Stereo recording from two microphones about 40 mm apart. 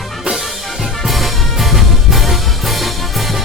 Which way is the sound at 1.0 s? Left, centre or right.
Centre.